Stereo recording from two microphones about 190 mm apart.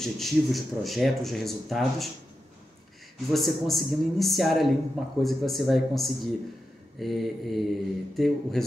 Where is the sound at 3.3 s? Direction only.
Centre (ahead or behind).